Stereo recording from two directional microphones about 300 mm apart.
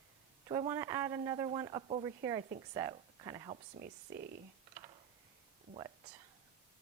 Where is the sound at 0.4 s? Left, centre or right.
Centre.